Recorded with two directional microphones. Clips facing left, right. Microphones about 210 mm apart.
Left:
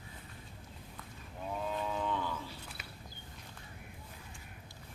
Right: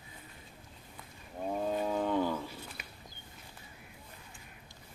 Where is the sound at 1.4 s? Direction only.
45° right (ahead or behind).